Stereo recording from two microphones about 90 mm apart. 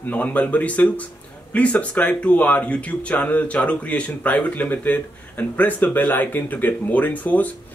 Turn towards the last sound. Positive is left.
turn(degrees=20)  # may be behind; listen again after turning